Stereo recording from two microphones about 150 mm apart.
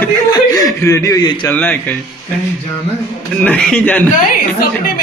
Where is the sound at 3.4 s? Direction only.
5° left (ahead or behind).